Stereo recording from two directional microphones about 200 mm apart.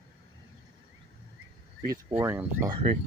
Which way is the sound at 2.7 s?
25° right (ahead or behind).